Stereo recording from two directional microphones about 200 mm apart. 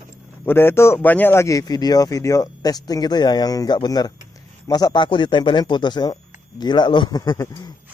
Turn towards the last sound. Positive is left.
turn(degrees=20)  # may be behind; listen again after turning